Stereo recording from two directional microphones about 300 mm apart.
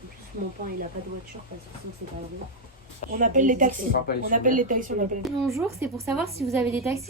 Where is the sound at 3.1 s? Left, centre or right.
Right.